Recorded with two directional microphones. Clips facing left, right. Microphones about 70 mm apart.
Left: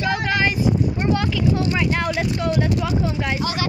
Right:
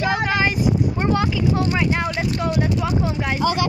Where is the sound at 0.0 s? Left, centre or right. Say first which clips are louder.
Right 1 dB; right.